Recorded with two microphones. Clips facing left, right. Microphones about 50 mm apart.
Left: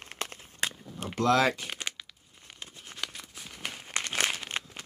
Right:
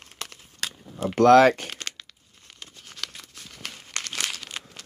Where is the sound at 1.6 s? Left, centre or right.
Centre.